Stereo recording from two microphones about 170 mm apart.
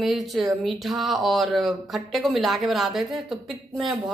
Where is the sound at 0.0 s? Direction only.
Centre (ahead or behind).